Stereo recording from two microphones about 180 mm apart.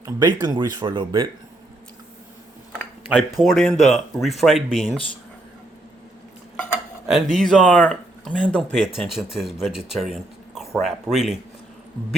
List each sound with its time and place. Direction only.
0.0 s speech: 25° right (ahead or behind)
3.1 s speech: 5° right (ahead or behind)
7.3 s speech: 5° left (ahead or behind)